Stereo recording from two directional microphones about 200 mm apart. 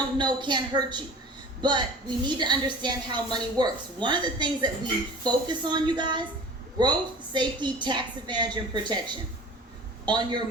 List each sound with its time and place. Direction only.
0.2 s a woman's voice: 20° right (ahead or behind)
2.2 s a woman's voice: 20° right (ahead or behind)